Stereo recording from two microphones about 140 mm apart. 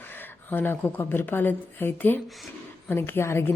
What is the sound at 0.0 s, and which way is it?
A woman's voice, 15° left (ahead or behind).